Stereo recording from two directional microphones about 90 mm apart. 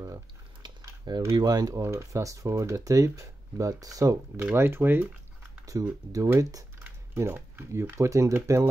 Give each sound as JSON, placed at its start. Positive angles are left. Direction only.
{"t": 0.6, "sound": "a sound", "side_deg": -55}
{"t": 1.3, "sound": "speech", "side_deg": -45}
{"t": 1.8, "sound": "speech", "side_deg": -30}
{"t": 4.4, "sound": "speech", "side_deg": -25}
{"t": 5.7, "sound": "speech", "side_deg": -35}
{"t": 7.2, "sound": "speech", "side_deg": -25}